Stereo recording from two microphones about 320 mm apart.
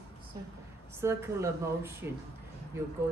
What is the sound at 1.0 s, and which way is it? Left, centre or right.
Speech, centre.